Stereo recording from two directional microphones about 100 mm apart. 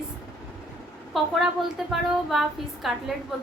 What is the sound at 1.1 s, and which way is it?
A woman's voice, centre (ahead or behind).